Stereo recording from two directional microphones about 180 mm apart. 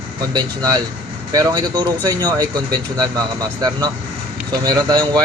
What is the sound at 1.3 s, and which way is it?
Speech, 25° right (ahead or behind).